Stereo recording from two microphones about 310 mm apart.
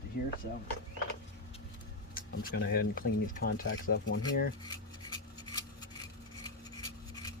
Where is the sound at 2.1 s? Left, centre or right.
Left.